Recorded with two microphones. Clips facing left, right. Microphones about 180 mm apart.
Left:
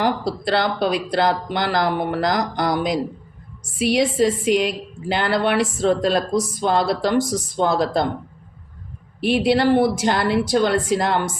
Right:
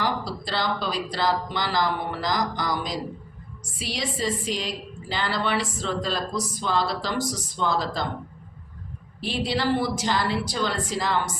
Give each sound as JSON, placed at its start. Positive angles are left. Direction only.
{"t": 0.0, "sound": "speech", "side_deg": 60}
{"t": 9.2, "sound": "speech", "side_deg": 60}